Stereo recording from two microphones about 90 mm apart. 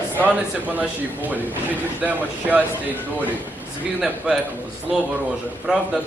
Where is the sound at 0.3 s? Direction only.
20° right (ahead or behind).